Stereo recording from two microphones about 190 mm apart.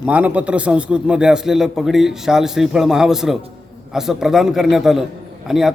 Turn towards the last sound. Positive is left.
turn(degrees=0)  # may be behind; listen again after turning